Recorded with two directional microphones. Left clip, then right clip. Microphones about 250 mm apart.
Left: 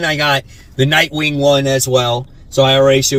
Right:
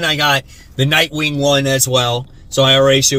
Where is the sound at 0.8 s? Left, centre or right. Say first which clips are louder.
Left 1 dB; centre.